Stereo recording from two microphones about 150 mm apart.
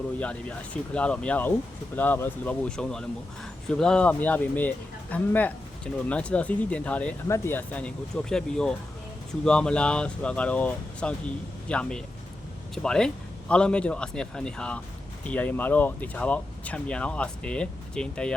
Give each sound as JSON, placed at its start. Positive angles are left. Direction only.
{"t": 0.2, "sound": "speech", "side_deg": 10}